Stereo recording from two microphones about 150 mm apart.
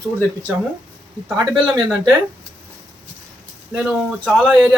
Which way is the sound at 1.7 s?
25° right (ahead or behind).